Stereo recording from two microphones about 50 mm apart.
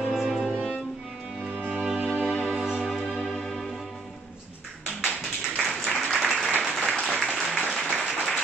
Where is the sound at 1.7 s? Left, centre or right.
Centre.